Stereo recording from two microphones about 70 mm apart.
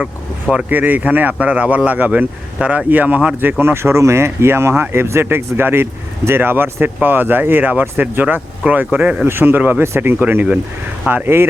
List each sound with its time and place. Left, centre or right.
0.5 s speech: right
3.6 s speech: right
9.0 s speech: centre
9.2 s speech: right
11.1 s speech: right